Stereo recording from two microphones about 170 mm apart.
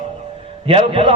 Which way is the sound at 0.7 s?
30° right (ahead or behind).